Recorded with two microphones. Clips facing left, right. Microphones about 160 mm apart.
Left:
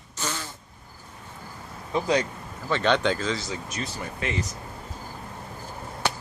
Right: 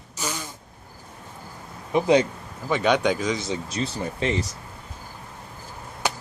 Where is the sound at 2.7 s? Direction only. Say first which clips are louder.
Right 2 dB; 10° right (ahead or behind); by 4.4 s 30° right (ahead or behind).